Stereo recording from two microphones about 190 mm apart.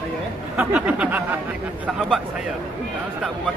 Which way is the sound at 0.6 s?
5° right (ahead or behind).